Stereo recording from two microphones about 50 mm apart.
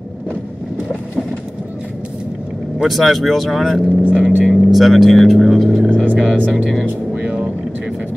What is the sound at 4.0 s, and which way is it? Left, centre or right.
Speech, right.